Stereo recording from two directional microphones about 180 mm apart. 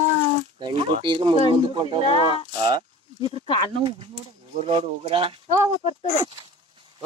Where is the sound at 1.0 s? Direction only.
25° right (ahead or behind).